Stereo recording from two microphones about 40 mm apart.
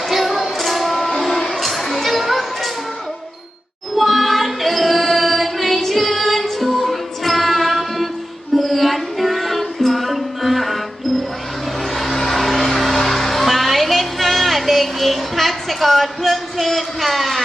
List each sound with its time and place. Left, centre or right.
0.1 s music: centre
3.9 s music: centre
11.9 s music: centre